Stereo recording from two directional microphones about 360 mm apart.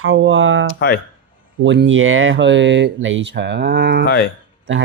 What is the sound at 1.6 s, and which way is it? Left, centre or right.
Speech, right.